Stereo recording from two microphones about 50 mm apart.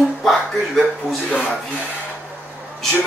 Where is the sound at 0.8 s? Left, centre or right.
Left.